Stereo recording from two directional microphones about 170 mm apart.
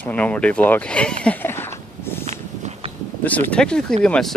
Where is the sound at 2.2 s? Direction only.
45° right (ahead or behind).